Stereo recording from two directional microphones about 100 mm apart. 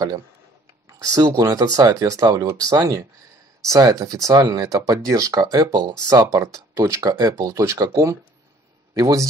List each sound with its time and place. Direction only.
0.8 s speech: 35° right (ahead or behind)